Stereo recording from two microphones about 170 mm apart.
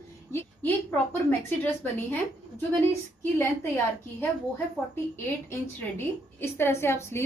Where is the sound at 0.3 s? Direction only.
10° left (ahead or behind).